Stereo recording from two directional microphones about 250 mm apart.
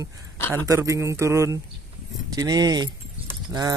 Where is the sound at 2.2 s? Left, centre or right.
Centre.